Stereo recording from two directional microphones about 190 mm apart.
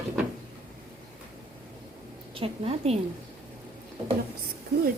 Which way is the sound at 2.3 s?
30° right (ahead or behind).